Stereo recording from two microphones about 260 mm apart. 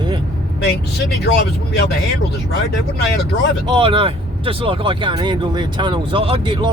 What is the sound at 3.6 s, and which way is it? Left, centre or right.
Speech, centre.